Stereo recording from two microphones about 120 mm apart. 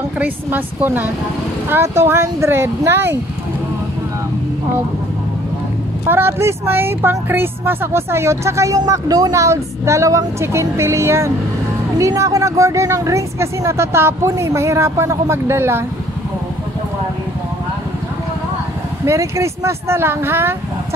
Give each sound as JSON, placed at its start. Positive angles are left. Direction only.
{"t": 0.2, "sound": "speech", "side_deg": -15}
{"t": 6.0, "sound": "speech", "side_deg": -20}
{"t": 19.0, "sound": "speech", "side_deg": -25}